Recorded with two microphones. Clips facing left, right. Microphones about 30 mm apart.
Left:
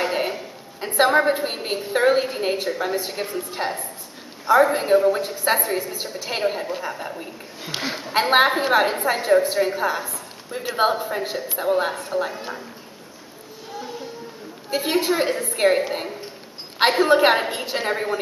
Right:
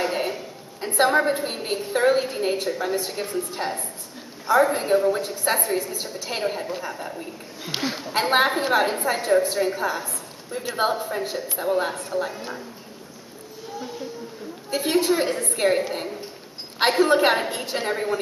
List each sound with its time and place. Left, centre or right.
0.0 s a woman's voice: centre
14.7 s a woman's voice: centre